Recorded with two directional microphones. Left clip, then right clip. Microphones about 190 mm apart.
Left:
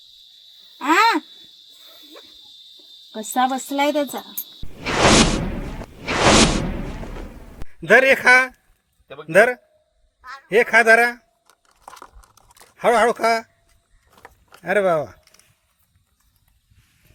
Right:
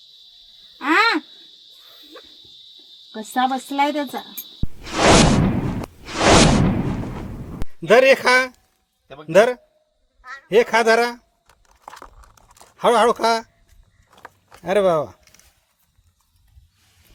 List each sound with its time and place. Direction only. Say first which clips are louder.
0.8 s owl: left 1 dB; 5° right (ahead or behind)
3.1 s speech: even; 10° right (ahead or behind)
4.9 s whoosh: right 1 dB; centre (ahead or behind)
9.0 s a man's voice: left 1 dB; 25° left (ahead or behind)
9.3 s a man's voice: even; 5° right (ahead or behind)
12.7 s speech: right 1 dB; 10° right (ahead or behind)
14.2 s a sound: right 2 dB; 5° right (ahead or behind)